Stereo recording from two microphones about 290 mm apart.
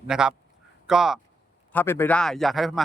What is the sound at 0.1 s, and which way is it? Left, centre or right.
Speech, centre.